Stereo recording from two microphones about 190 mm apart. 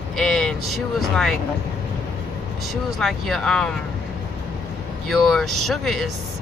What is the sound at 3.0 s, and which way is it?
Speech, centre (ahead or behind).